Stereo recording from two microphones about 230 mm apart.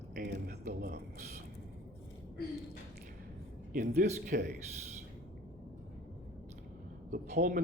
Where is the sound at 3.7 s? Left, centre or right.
Right.